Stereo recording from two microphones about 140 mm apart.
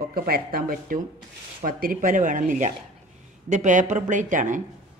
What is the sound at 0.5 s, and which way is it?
Speech, 90° right.